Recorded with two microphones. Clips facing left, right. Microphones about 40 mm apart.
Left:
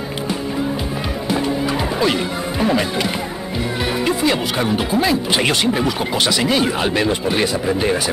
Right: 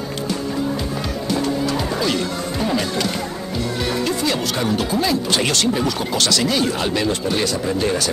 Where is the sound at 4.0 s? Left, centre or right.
Left.